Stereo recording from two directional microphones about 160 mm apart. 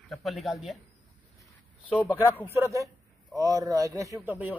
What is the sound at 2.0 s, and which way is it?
A man's voice, 10° right (ahead or behind).